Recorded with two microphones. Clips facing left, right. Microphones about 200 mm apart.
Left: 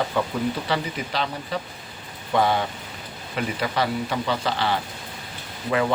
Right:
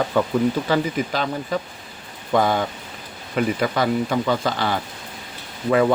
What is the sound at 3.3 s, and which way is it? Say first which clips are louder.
Speech: right 5 dB; 45° right (ahead or behind).